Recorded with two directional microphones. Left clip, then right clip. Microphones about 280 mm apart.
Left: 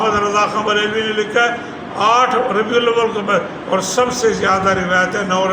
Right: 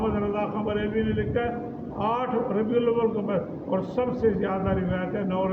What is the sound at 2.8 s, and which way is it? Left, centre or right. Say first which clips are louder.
A man's voice: left 9 dB; centre.